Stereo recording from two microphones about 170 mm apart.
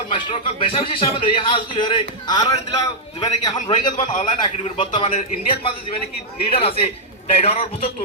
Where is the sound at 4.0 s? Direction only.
45° left (ahead or behind).